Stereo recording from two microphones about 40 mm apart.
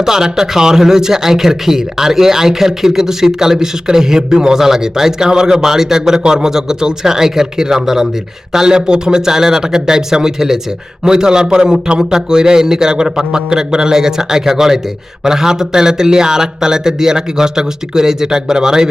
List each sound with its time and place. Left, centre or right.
0.0 s speech: centre